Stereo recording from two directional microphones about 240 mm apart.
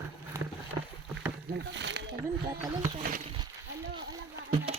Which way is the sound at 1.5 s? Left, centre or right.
Right.